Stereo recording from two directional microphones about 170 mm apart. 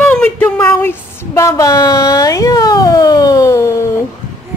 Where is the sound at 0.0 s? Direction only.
5° left (ahead or behind).